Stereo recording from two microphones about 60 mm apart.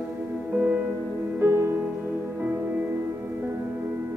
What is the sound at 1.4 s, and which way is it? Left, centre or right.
Music, right.